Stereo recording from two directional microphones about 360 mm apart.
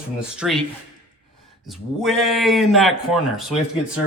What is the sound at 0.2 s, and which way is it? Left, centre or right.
Speech, centre.